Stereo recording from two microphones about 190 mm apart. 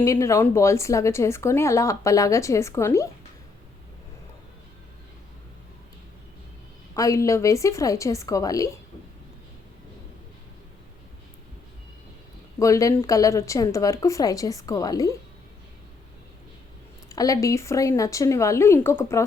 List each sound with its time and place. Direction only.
0.0 s speech: 15° left (ahead or behind)
6.9 s speech: 15° left (ahead or behind)
12.5 s speech: 15° left (ahead or behind)
17.1 s speech: 20° left (ahead or behind)